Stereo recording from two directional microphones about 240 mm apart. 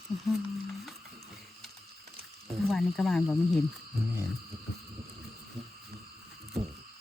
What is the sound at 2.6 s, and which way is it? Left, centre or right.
Speech, centre.